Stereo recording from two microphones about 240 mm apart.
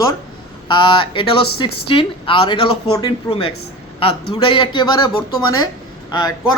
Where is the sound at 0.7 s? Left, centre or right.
Left.